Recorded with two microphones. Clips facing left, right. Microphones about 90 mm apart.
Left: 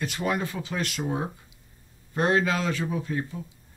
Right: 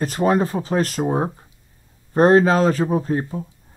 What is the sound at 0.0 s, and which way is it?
Speech, 40° right (ahead or behind).